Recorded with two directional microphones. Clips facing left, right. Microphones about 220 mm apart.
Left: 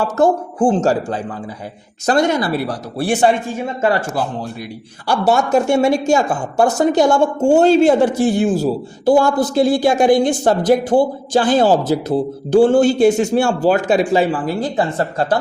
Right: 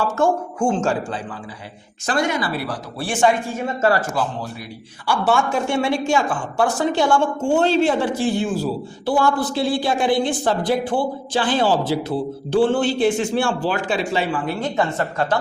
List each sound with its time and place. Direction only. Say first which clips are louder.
0.0 s speech: left 4 dB; 35° left (ahead or behind)
5.0 s a man's voice: left 4 dB; 40° left (ahead or behind)